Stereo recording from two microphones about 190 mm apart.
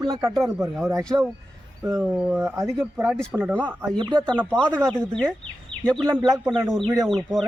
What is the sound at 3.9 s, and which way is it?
Speech, 25° right (ahead or behind).